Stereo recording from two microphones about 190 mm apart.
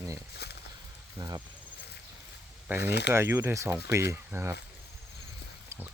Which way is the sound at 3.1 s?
15° right (ahead or behind).